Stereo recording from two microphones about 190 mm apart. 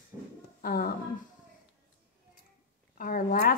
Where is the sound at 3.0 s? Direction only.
45° left (ahead or behind).